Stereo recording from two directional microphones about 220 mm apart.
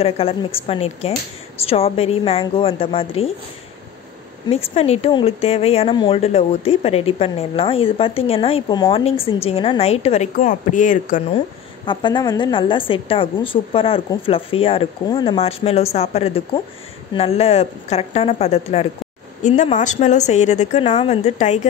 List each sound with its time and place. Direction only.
0.0 s speech: 25° left (ahead or behind)
4.5 s speech: 25° left (ahead or behind)
11.8 s a woman's voice: 20° left (ahead or behind)